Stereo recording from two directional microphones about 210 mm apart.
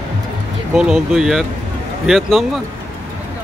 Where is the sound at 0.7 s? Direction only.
Centre (ahead or behind).